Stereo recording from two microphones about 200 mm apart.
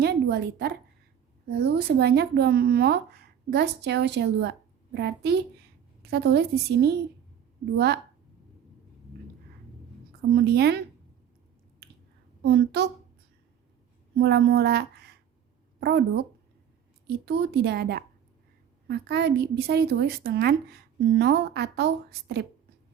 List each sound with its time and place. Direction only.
0.0 s a sound: 55° right (ahead or behind)
1.5 s a woman's voice: 55° right (ahead or behind)
10.3 s a woman's voice: 55° right (ahead or behind)
12.4 s a woman's voice: 55° right (ahead or behind)
14.2 s a woman's voice: 55° right (ahead or behind)